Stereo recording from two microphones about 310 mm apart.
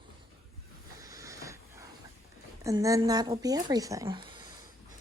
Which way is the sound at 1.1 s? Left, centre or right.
Centre.